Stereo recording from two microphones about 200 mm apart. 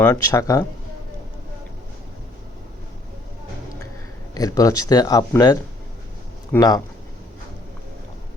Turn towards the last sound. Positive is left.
turn(degrees=20)  # may be behind; listen again after turning